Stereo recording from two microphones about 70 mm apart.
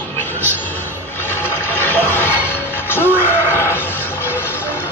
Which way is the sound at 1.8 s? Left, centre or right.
Left.